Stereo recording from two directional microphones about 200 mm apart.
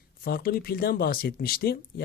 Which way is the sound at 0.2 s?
50° left (ahead or behind).